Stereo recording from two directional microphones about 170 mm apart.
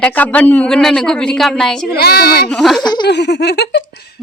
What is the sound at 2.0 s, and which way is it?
Speech, 70° left (ahead or behind).